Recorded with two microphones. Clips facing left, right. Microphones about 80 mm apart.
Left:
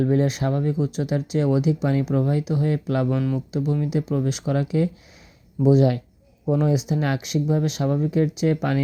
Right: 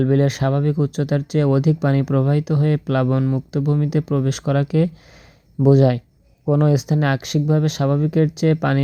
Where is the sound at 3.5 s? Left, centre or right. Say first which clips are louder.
Right 4 dB; right.